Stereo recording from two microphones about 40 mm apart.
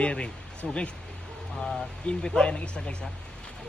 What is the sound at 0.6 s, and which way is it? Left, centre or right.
Speech, centre.